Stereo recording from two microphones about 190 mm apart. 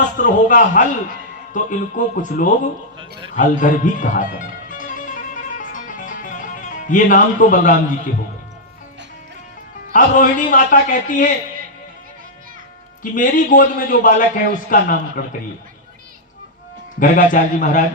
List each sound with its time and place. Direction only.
0.2 s a man's voice: 45° left (ahead or behind)
3.0 s a sound: 25° right (ahead or behind)
3.3 s music: 45° left (ahead or behind)
9.9 s a man's voice: 45° left (ahead or behind)
13.0 s a man's voice: 45° left (ahead or behind)
16.9 s a man's voice: 45° left (ahead or behind)